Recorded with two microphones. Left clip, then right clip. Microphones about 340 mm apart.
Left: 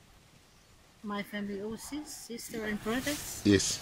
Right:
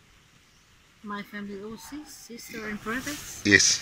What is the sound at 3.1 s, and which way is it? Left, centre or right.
Speech, centre.